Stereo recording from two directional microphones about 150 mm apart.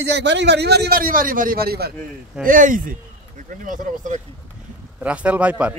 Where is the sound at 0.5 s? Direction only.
90° right.